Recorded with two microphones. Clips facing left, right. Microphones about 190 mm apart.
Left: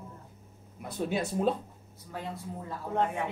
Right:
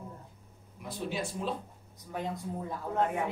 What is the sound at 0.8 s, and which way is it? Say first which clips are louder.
Speech: left 4 dB; 55° left (ahead or behind).